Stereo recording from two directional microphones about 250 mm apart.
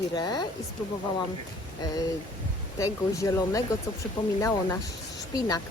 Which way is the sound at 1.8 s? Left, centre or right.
Centre.